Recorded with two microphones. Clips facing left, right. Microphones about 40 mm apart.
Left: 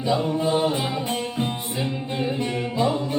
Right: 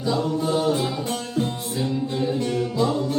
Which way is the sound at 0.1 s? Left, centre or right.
Left.